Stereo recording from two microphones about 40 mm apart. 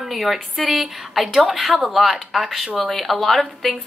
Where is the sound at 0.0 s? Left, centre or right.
Centre.